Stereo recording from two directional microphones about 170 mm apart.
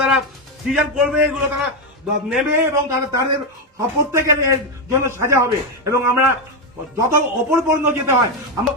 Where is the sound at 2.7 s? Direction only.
15° right (ahead or behind).